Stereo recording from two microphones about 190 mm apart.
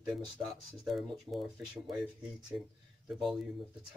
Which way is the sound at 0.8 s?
Centre (ahead or behind).